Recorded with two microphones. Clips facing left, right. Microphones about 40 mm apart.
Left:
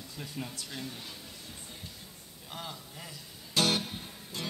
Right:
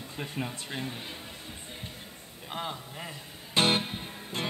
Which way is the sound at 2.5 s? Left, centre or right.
Right.